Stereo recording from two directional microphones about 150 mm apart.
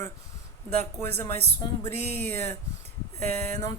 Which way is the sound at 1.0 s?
15° left (ahead or behind).